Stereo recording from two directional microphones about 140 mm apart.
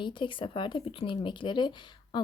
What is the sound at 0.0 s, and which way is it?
Speech, 35° left (ahead or behind).